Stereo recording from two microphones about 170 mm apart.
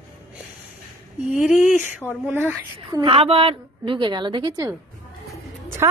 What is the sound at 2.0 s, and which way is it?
Speech, 10° left (ahead or behind).